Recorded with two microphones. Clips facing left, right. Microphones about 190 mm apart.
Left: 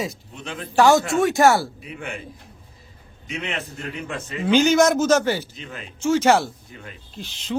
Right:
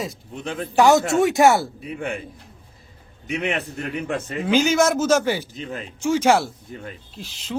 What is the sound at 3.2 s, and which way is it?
Speech, 60° right (ahead or behind).